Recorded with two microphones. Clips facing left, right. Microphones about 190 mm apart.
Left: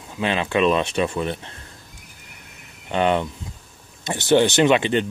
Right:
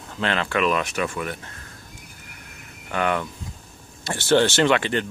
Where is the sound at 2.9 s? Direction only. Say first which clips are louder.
Left 4 dB; 20° left (ahead or behind).